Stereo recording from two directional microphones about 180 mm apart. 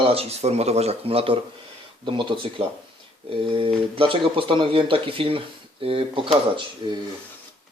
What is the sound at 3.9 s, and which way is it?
Speech, 30° right (ahead or behind).